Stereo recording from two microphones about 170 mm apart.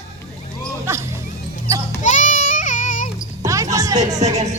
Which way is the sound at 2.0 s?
45° left (ahead or behind).